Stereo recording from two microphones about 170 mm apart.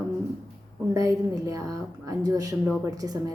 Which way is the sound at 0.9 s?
20° right (ahead or behind).